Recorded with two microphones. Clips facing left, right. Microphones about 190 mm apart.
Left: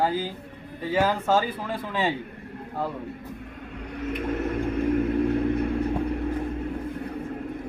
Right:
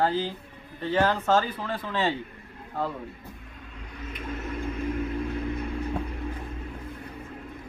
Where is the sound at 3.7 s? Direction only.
60° left (ahead or behind).